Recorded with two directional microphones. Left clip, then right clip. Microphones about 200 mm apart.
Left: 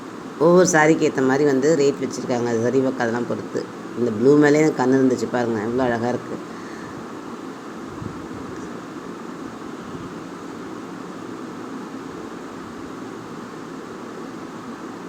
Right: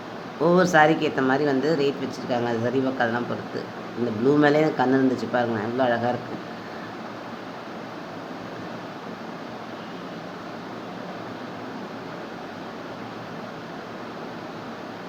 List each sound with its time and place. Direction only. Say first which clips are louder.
0.4 s speech: left 3 dB; 15° left (ahead or behind)
4.3 s speech: left 4 dB; 15° left (ahead or behind)